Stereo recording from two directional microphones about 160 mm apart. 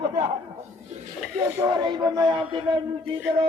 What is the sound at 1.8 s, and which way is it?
Speech, 25° right (ahead or behind).